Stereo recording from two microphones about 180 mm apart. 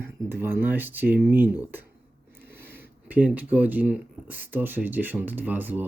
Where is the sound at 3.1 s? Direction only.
10° right (ahead or behind).